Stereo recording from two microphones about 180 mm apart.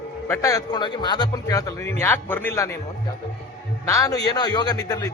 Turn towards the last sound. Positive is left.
turn(degrees=20)  # may be behind; listen again after turning